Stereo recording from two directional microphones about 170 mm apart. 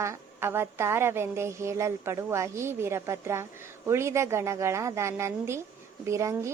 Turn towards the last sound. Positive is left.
turn(degrees=-15)  # may be behind; listen again after turning